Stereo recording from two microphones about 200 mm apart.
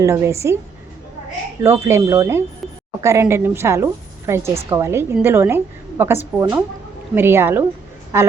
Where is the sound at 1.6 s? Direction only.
15° right (ahead or behind).